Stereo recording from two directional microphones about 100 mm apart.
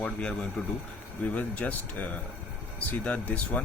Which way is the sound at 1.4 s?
15° left (ahead or behind).